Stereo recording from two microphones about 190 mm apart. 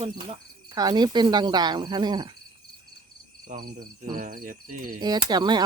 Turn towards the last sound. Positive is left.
turn(degrees=-20)  # may be behind; listen again after turning